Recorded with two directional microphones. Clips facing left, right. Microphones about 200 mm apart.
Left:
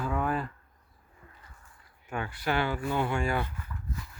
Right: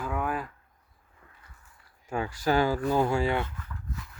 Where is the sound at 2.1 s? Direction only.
35° right (ahead or behind).